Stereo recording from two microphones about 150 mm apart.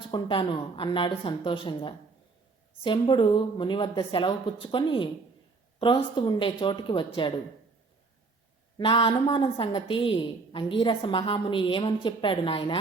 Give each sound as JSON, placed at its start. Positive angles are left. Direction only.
{"t": 0.1, "sound": "a woman's voice", "side_deg": 35}
{"t": 8.8, "sound": "a woman's voice", "side_deg": 35}